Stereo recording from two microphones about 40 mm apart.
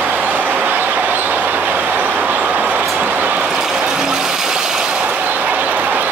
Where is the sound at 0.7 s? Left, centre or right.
Right.